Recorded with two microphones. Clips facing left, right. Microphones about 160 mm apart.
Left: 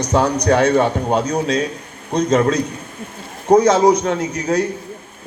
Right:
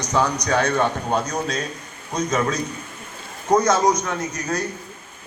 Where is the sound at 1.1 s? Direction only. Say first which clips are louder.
Left 6 dB; 60° left (ahead or behind).